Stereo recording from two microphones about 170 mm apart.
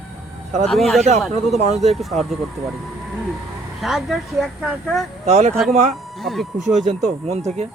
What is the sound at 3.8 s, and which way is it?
Speech, centre (ahead or behind).